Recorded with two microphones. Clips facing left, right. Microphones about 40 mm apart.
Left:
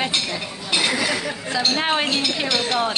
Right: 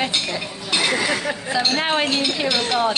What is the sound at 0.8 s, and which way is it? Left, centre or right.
Speech, right.